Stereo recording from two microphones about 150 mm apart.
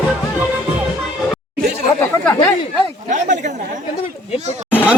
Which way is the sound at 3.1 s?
55° right (ahead or behind).